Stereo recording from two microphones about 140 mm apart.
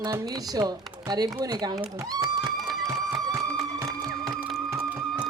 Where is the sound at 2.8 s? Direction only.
25° right (ahead or behind).